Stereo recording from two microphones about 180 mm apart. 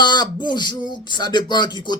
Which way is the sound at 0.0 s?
25° left (ahead or behind).